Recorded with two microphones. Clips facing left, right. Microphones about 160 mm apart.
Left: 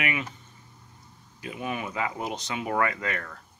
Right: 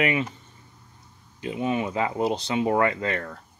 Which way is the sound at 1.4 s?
25° right (ahead or behind).